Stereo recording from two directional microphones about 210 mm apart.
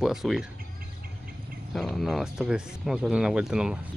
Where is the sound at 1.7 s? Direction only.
Centre (ahead or behind).